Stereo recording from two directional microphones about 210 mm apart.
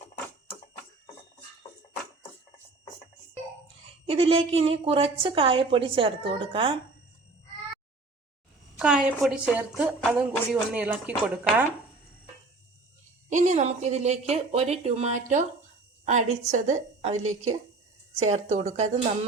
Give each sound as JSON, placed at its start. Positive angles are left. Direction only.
{"t": 4.0, "sound": "a woman's voice", "side_deg": -25}
{"t": 8.8, "sound": "speech", "side_deg": -5}
{"t": 13.3, "sound": "speech", "side_deg": -35}